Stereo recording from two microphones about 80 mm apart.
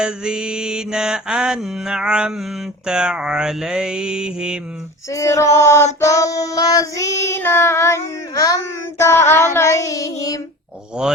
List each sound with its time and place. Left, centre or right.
0.0 s mantra: centre
5.1 s child singing: left